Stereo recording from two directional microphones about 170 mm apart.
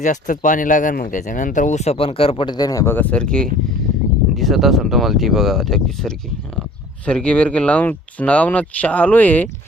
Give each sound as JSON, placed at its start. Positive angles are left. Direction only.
{"t": 0.0, "sound": "speech", "side_deg": 50}